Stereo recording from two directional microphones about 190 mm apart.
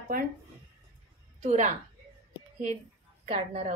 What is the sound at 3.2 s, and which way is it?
Speech, 35° right (ahead or behind).